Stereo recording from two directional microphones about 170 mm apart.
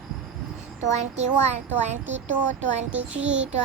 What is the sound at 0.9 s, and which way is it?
Speech, 45° right (ahead or behind).